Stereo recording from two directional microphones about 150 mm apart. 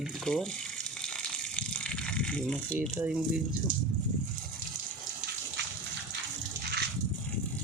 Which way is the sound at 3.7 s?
70° right (ahead or behind).